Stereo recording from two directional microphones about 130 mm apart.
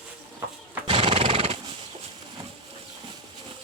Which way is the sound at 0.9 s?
45° right (ahead or behind).